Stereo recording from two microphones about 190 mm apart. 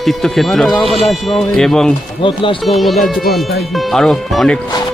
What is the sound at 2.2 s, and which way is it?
Speech, 25° left (ahead or behind).